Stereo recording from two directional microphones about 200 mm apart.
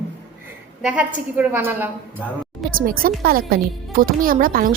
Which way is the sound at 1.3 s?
10° right (ahead or behind).